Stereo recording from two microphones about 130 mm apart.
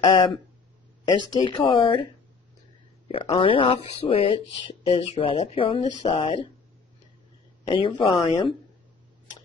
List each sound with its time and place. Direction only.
0.0 s speech: 35° left (ahead or behind)
3.3 s speech: 40° left (ahead or behind)
7.6 s speech: 40° left (ahead or behind)